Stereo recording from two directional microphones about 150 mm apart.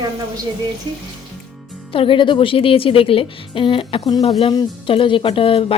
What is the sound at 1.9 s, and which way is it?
A woman's voice, 35° left (ahead or behind).